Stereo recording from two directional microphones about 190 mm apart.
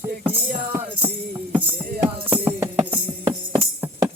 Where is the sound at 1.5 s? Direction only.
10° right (ahead or behind).